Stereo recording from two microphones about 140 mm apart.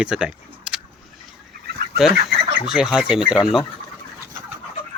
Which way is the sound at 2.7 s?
5° right (ahead or behind).